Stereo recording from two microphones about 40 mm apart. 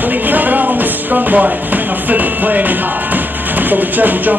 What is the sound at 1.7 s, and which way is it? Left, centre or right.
Speech, right.